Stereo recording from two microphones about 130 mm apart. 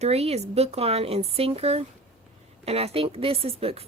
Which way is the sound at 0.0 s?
55° right (ahead or behind).